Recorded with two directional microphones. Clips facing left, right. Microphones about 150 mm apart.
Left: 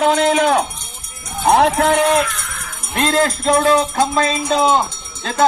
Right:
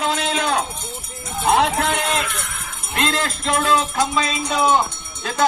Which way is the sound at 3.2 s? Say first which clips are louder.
Left 7 dB; 40° left (ahead or behind).